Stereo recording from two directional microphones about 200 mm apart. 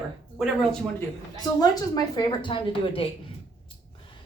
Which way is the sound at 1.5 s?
20° left (ahead or behind).